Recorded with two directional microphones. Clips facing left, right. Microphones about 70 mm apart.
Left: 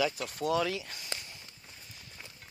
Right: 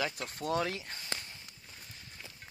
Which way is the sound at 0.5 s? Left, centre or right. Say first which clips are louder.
Left 3 dB; right.